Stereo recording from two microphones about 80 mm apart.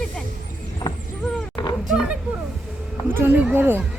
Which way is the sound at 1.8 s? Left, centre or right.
Centre.